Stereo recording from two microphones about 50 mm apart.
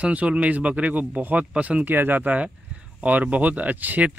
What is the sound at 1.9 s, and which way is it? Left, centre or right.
Speech, right.